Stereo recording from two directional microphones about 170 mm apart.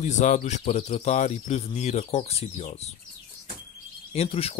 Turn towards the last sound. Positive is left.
turn(degrees=35)  # may be behind; listen again after turning